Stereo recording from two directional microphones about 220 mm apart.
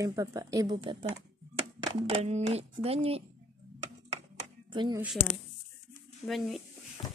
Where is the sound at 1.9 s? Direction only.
25° right (ahead or behind).